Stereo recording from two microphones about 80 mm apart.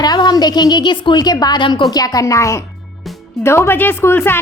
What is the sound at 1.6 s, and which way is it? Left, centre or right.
Speech, left.